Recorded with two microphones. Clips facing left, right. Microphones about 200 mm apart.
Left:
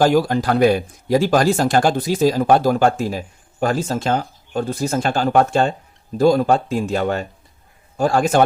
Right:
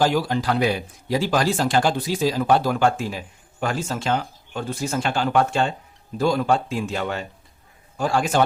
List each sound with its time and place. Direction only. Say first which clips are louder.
0.0 s speech: left 5 dB; 45° left (ahead or behind)